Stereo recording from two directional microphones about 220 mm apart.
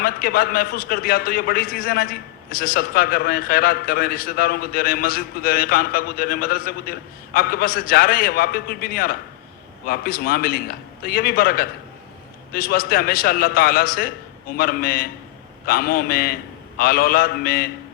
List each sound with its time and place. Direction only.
0.0 s a man's voice: 45° left (ahead or behind)